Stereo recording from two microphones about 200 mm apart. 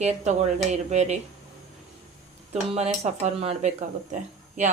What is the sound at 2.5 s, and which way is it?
Speech, 30° right (ahead or behind).